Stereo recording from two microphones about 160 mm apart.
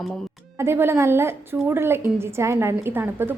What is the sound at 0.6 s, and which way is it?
A woman's voice, 15° right (ahead or behind).